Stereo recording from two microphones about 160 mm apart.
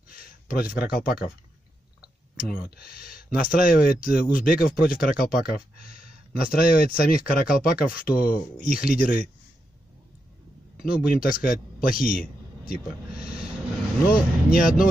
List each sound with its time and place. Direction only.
0.1 s speech: 60° left (ahead or behind)
2.3 s speech: 70° left (ahead or behind)
11.1 s a man's voice: 60° left (ahead or behind)
12.7 s speech: 5° right (ahead or behind)
14.0 s speech: 60° left (ahead or behind)